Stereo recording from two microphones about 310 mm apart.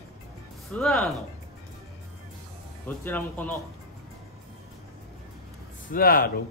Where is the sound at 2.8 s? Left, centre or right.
Centre.